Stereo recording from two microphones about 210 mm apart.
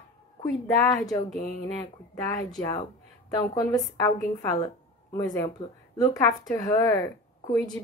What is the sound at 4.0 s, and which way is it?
A woman's voice, 20° left (ahead or behind).